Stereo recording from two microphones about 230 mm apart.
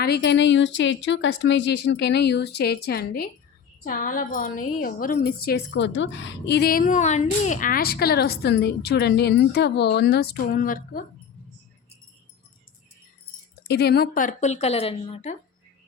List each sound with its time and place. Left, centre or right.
0.0 s a woman's voice: left
13.7 s speech: left